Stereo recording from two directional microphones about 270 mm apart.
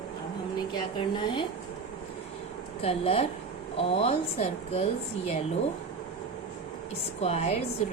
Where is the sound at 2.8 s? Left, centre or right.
Left.